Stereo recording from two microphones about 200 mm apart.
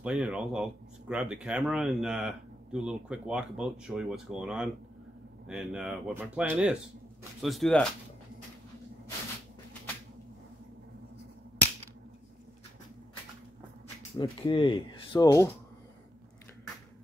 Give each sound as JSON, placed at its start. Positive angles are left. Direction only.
{"t": 0.0, "sound": "speech", "side_deg": -5}
{"t": 14.1, "sound": "speech", "side_deg": 20}